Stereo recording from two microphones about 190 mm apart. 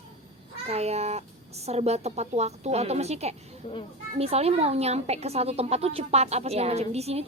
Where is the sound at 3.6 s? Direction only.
30° left (ahead or behind).